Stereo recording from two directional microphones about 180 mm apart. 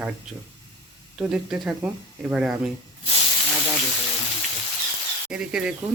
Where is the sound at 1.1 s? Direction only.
5° right (ahead or behind).